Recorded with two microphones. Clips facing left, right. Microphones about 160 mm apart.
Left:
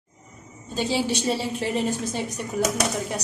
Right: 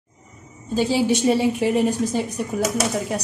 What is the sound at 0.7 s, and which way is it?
A woman's voice, 5° right (ahead or behind).